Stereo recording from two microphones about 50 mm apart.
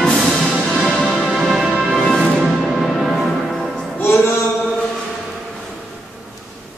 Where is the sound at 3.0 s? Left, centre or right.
Centre.